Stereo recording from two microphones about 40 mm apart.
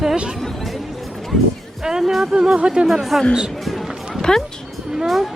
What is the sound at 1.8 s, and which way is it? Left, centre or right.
Speech, centre.